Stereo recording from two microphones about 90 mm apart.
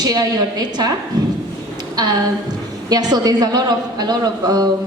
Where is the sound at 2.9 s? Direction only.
50° right (ahead or behind).